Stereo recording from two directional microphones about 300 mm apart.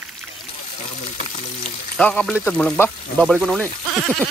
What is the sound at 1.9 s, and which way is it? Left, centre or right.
Speech, centre.